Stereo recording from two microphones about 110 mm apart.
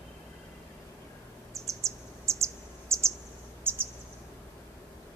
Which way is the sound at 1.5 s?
30° right (ahead or behind).